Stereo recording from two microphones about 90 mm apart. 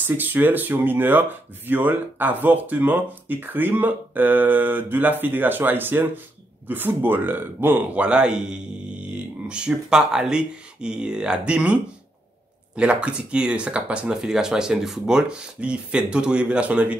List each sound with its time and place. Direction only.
0.0 s speech: 20° right (ahead or behind)